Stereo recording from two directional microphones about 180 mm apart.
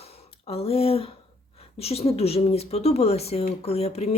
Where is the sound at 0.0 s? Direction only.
35° left (ahead or behind).